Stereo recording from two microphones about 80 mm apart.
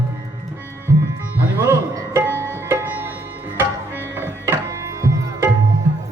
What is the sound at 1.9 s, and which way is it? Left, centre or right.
Music, right.